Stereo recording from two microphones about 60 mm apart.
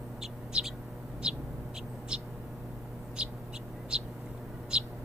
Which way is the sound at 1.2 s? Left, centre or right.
Centre.